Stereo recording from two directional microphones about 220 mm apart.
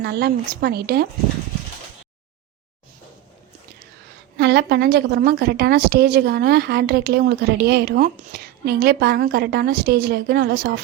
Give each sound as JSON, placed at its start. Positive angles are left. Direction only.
{"t": 0.0, "sound": "a woman's voice", "side_deg": -45}
{"t": 4.4, "sound": "a woman's voice", "side_deg": -50}